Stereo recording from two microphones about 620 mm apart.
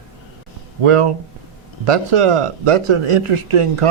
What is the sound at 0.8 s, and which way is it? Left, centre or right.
Speech, right.